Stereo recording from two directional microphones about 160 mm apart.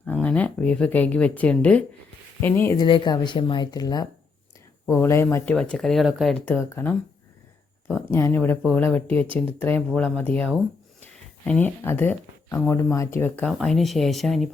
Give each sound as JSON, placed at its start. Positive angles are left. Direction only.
{"t": 0.0, "sound": "speech", "side_deg": 10}
{"t": 2.7, "sound": "speech", "side_deg": 30}
{"t": 5.5, "sound": "speech", "side_deg": 5}
{"t": 6.3, "sound": "speech", "side_deg": 10}
{"t": 13.4, "sound": "speech", "side_deg": 5}